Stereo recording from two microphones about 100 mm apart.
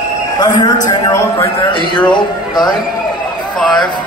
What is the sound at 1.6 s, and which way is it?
Speech, 55° left (ahead or behind).